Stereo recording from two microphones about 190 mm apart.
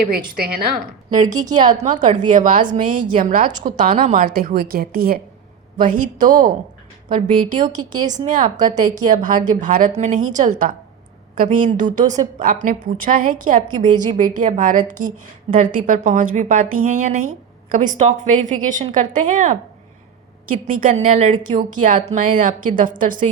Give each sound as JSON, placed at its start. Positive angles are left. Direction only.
{"t": 1.1, "sound": "a woman's voice", "side_deg": -20}
{"t": 1.8, "sound": "a woman's voice", "side_deg": -40}
{"t": 7.2, "sound": "a woman's voice", "side_deg": -20}
{"t": 8.1, "sound": "a woman's voice", "side_deg": -40}
{"t": 8.5, "sound": "a woman's voice", "side_deg": -20}
{"t": 9.0, "sound": "a woman's voice", "side_deg": -45}
{"t": 13.9, "sound": "a woman's voice", "side_deg": -20}
{"t": 14.2, "sound": "a woman's voice", "side_deg": -40}